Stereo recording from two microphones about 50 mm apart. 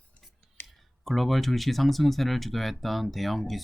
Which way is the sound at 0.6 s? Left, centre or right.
Left.